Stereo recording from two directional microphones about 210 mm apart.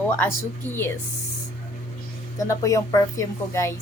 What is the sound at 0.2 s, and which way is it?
Speech, 10° left (ahead or behind).